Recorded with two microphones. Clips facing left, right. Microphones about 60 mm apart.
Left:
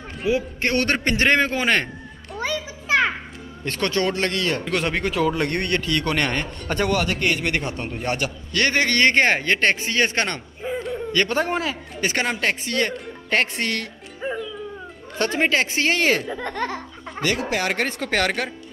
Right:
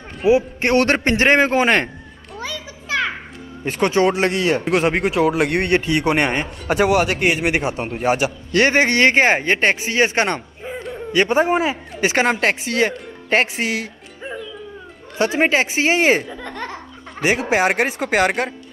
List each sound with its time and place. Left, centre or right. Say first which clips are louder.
0.3 s a man's voice: right 7 dB; right
2.4 s a sound: left 4 dB; left
3.6 s a man's voice: right 5 dB; centre
3.9 s a man's voice: right 6 dB; centre
5.5 s a man's voice: right 5 dB; right
6.8 s a man's voice: right 6 dB; right
7.2 s a man's voice: right 4 dB; centre
10.6 s a sound: left 2 dB; centre
11.1 s a man's voice: right 6 dB; centre
14.2 s music: left 3 dB; centre
15.1 s a man's voice: right 4 dB; centre
16.3 s speech: left 3 dB; centre
16.6 s a man's voice: left 3 dB; centre
17.8 s a man's voice: right 5 dB; centre